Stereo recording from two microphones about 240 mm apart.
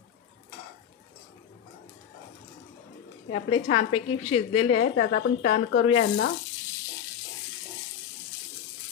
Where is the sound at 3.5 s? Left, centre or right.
Left.